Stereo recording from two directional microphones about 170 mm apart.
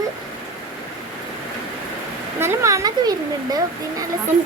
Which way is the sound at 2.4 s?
15° right (ahead or behind).